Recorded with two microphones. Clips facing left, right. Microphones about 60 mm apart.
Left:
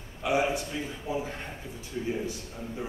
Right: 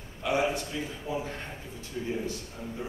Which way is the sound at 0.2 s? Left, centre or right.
Centre.